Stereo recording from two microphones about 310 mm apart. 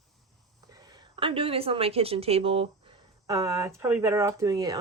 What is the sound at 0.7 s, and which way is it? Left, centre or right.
A woman's voice, centre.